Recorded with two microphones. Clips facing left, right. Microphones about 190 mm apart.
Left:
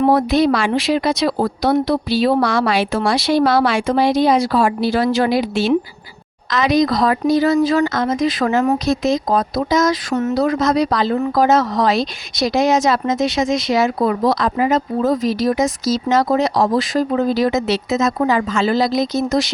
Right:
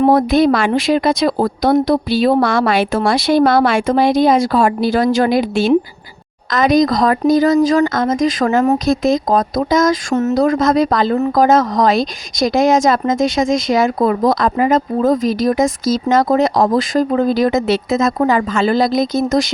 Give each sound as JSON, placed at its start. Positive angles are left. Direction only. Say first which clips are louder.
{"t": 0.0, "sound": "a woman's voice", "louder": "right 3 dB", "side_deg": -45}